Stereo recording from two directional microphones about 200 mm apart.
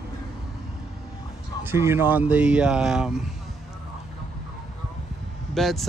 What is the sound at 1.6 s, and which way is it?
Speech, 10° right (ahead or behind).